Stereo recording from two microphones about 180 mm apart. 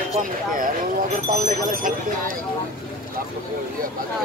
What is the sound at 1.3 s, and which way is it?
Speech, 45° right (ahead or behind).